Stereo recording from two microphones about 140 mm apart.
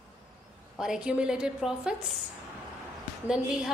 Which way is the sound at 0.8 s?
5° right (ahead or behind).